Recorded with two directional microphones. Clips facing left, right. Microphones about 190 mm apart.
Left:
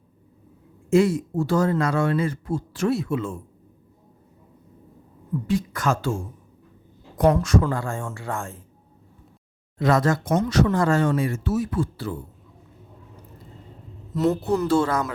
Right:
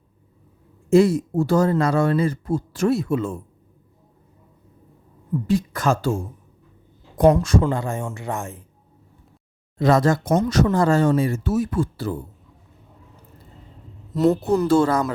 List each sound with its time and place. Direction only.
0.9 s speech: 35° right (ahead or behind)
5.5 s speech: 35° right (ahead or behind)
7.4 s speech: 25° right (ahead or behind)
9.7 s speech: 30° right (ahead or behind)
11.5 s speech: 50° right (ahead or behind)
14.4 s speech: 40° right (ahead or behind)